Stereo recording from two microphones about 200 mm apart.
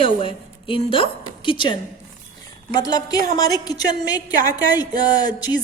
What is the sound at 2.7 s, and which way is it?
A woman's voice, 20° left (ahead or behind).